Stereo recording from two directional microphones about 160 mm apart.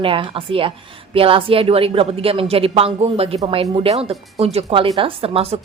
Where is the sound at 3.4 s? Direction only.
25° right (ahead or behind).